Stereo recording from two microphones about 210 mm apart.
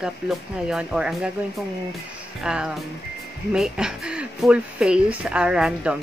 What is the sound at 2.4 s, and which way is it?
Speech, 5° right (ahead or behind).